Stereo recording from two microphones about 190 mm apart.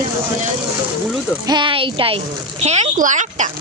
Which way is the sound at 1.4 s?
25° right (ahead or behind).